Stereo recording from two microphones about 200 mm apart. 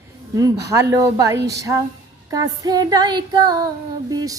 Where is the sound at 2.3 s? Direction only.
20° right (ahead or behind).